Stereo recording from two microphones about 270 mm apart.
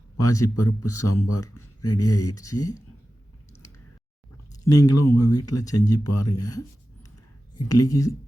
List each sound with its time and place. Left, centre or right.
0.2 s speech: centre
0.4 s speech: left
0.9 s speech: centre
1.5 s a sound: left
2.0 s speech: centre
4.6 s speech: centre
4.9 s speech: left
5.3 s speech: centre
7.7 s speech: centre